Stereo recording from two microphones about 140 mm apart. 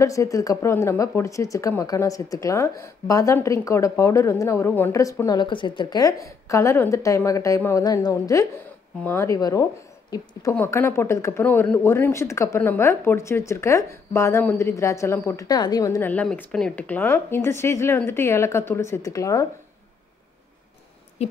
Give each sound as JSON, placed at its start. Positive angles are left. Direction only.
{"t": 0.0, "sound": "speech", "side_deg": 25}
{"t": 16.0, "sound": "speech", "side_deg": 10}